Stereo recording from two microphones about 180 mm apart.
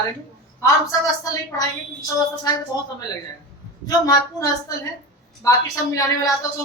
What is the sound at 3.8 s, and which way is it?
A woman's voice, 20° left (ahead or behind).